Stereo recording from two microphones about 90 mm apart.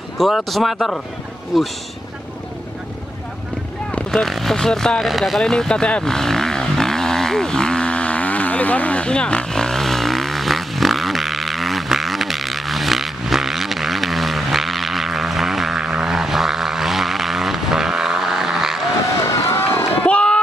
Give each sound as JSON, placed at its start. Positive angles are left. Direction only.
{"t": 0.2, "sound": "speech", "side_deg": 0}
{"t": 4.1, "sound": "vehicle", "side_deg": 0}
{"t": 19.2, "sound": "run", "side_deg": 30}
{"t": 20.1, "sound": "a sound", "side_deg": 10}